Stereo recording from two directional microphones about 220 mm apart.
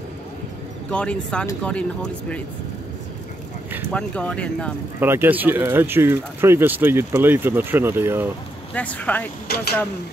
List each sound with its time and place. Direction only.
0.9 s speech: 5° left (ahead or behind)
3.9 s speech: 5° left (ahead or behind)
5.0 s speech: 10° right (ahead or behind)
8.7 s speech: 5° left (ahead or behind)
9.5 s speech: 45° left (ahead or behind)